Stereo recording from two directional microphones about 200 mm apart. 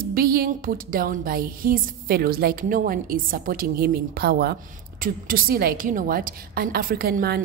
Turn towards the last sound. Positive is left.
turn(degrees=-50)  # may be behind; listen again after turning